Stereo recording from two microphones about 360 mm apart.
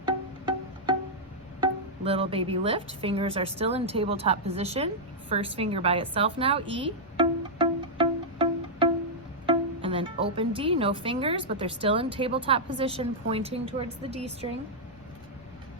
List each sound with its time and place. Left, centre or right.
0.0 s music: centre
1.6 s a woman's voice: centre
5.3 s a sound: centre
9.5 s music: centre
11.6 s a woman's voice: centre